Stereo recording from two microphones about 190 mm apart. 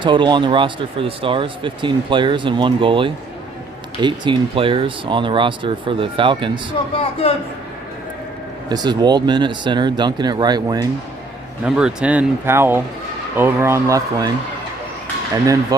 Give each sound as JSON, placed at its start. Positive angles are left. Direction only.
{"t": 0.0, "sound": "speech", "side_deg": -25}
{"t": 6.9, "sound": "a man's voice", "side_deg": 30}
{"t": 8.7, "sound": "speech", "side_deg": -20}
{"t": 11.6, "sound": "speech", "side_deg": -5}